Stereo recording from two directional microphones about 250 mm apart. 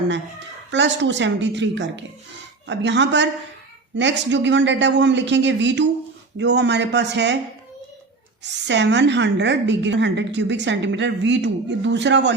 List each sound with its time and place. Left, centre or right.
0.7 s a woman's voice: right
8.4 s a woman's voice: right